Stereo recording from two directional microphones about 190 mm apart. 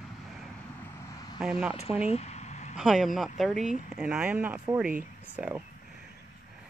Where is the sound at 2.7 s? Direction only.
Centre (ahead or behind).